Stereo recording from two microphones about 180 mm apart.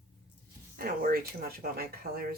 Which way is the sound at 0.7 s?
55° right (ahead or behind).